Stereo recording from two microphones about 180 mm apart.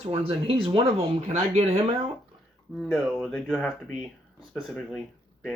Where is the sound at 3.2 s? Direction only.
5° left (ahead or behind).